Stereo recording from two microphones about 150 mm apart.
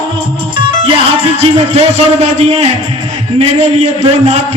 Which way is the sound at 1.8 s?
45° right (ahead or behind).